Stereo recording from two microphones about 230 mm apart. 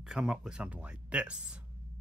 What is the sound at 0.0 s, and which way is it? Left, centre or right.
Speech, centre.